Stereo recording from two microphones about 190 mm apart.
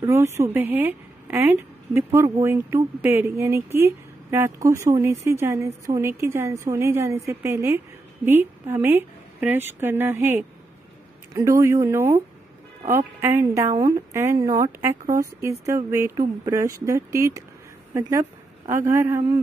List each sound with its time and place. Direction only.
0.0 s a woman's voice: 15° right (ahead or behind)
18.7 s speech: 15° right (ahead or behind)